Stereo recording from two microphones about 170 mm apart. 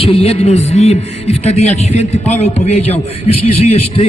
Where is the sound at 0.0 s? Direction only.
35° left (ahead or behind).